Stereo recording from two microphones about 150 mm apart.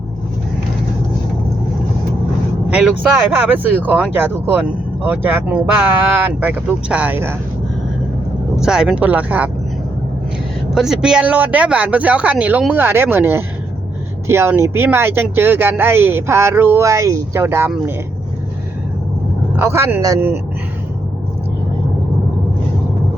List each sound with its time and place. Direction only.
2.6 s vehicle: 10° right (ahead or behind)
3.3 s speech: 10° right (ahead or behind)
8.5 s speech: 5° right (ahead or behind)
10.8 s speech: 5° right (ahead or behind)
19.5 s speech: 15° right (ahead or behind)